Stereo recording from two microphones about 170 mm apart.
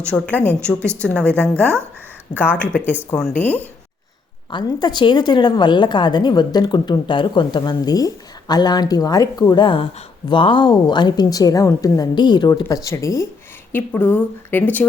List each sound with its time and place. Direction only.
0.0 s a woman's voice: 10° left (ahead or behind)
4.5 s a woman's voice: 25° left (ahead or behind); by 14.8 s 10° left (ahead or behind)